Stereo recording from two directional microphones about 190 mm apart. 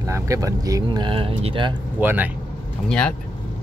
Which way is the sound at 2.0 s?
10° right (ahead or behind).